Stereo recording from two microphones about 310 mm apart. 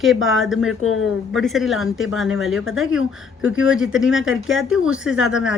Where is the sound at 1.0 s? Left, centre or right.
Centre.